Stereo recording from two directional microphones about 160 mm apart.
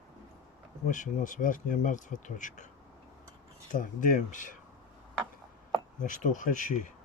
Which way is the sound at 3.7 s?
55° left (ahead or behind).